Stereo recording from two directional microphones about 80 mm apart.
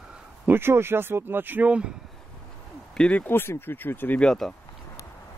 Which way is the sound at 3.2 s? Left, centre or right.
Left.